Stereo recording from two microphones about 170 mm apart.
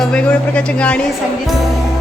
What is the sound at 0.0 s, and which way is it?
Speech, 5° left (ahead or behind).